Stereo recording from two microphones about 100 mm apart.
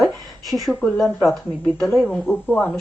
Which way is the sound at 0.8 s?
15° left (ahead or behind).